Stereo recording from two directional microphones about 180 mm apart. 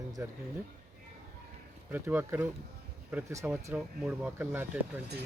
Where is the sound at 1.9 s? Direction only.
10° right (ahead or behind).